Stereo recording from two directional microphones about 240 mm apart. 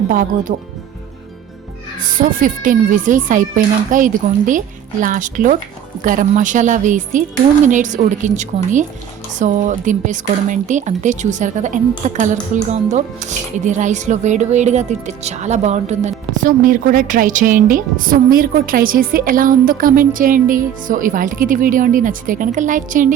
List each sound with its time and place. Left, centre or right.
0.1 s speech: right
2.0 s speech: right